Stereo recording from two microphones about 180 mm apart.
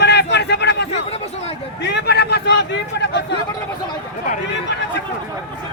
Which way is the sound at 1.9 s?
65° left (ahead or behind).